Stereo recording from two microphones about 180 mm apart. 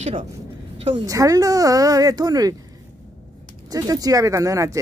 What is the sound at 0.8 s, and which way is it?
A woman's voice, 20° right (ahead or behind).